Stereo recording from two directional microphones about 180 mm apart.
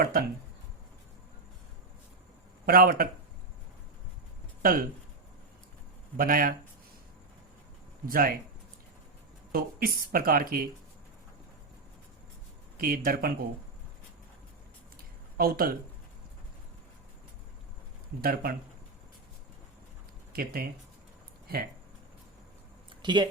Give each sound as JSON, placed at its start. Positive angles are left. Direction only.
{"t": 0.0, "sound": "speech", "side_deg": -55}
{"t": 2.6, "sound": "speech", "side_deg": -55}
{"t": 4.6, "sound": "speech", "side_deg": -55}
{"t": 6.1, "sound": "speech", "side_deg": -50}
{"t": 8.0, "sound": "speech", "side_deg": -55}
{"t": 9.5, "sound": "speech", "side_deg": -55}
{"t": 12.8, "sound": "speech", "side_deg": -55}
{"t": 15.4, "sound": "speech", "side_deg": -55}
{"t": 18.2, "sound": "speech", "side_deg": -60}
{"t": 20.3, "sound": "speech", "side_deg": -55}
{"t": 23.0, "sound": "speech", "side_deg": -25}